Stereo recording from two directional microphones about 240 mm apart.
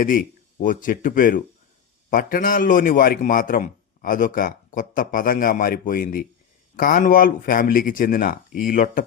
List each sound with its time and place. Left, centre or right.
0.6 s a man's voice: left